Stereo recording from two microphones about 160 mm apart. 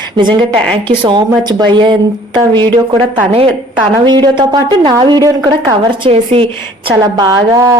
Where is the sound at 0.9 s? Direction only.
30° right (ahead or behind).